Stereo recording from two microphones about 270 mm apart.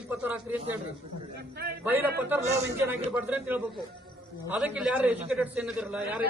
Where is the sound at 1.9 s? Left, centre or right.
Centre.